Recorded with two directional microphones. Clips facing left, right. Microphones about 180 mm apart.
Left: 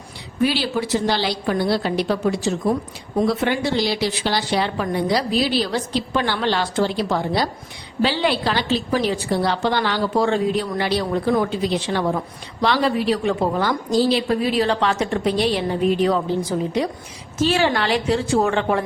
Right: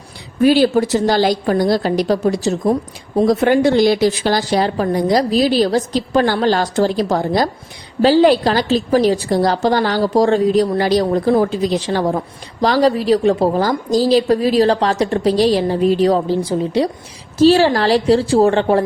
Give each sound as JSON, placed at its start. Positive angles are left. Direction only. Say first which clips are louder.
{"t": 0.4, "sound": "a woman's voice", "louder": "right 9 dB", "side_deg": -45}